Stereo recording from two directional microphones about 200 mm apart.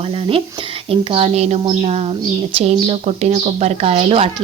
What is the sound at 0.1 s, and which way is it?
Speech, 25° right (ahead or behind).